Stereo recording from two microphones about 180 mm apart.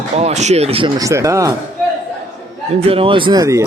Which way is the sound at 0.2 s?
40° right (ahead or behind).